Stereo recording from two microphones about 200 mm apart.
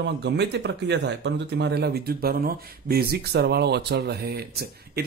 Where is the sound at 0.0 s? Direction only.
60° right (ahead or behind).